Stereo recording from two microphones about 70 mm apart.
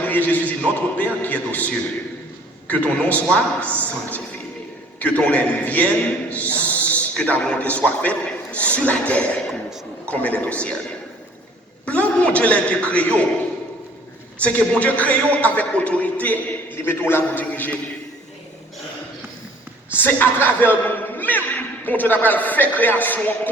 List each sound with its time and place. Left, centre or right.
0.0 s a man's voice: left
6.3 s owl: left
7.1 s a man's voice: centre
9.5 s a sound: centre
10.1 s a man's voice: centre
11.9 s a man's voice: centre
14.4 s a man's voice: centre
19.9 s a man's voice: left